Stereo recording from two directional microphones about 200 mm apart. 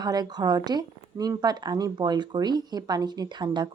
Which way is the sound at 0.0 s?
20° right (ahead or behind).